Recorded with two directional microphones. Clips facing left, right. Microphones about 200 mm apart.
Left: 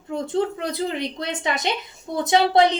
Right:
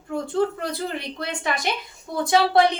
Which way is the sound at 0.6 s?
20° left (ahead or behind).